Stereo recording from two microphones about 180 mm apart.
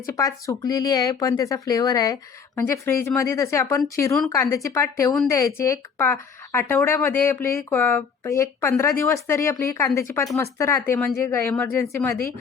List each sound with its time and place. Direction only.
0.1 s speech: 20° left (ahead or behind)